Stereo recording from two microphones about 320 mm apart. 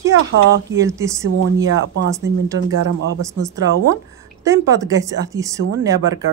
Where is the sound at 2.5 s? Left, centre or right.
Right.